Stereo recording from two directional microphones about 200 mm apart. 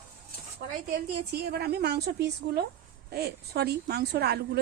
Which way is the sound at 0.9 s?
50° right (ahead or behind).